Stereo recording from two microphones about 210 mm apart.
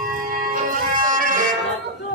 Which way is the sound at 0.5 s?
40° right (ahead or behind).